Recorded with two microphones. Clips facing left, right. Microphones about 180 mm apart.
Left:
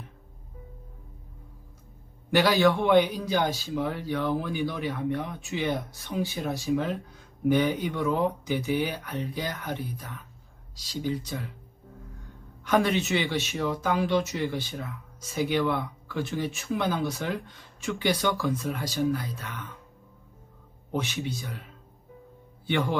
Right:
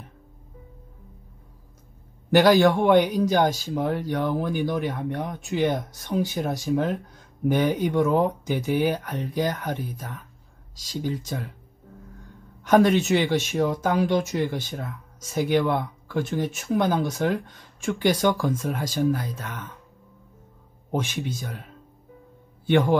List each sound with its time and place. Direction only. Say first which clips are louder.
2.3 s speech: right 5 dB; 45° right (ahead or behind)
12.6 s speech: right 6 dB; 45° right (ahead or behind)
20.9 s speech: right 3 dB; 50° right (ahead or behind)
22.7 s speech: right 7 dB; 45° right (ahead or behind)